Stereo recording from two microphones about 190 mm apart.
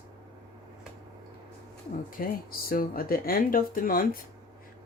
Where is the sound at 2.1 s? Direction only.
50° left (ahead or behind).